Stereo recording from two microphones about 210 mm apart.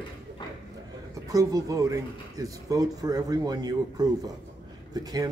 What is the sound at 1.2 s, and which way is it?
Speech, 15° right (ahead or behind).